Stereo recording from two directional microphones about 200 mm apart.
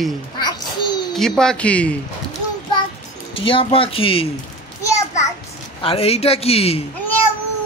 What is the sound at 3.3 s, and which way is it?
A man's voice, 25° left (ahead or behind).